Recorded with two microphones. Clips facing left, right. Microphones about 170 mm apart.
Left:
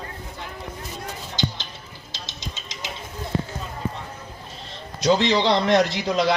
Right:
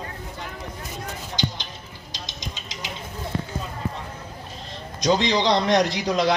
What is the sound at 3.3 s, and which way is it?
Clip-clop, 20° left (ahead or behind).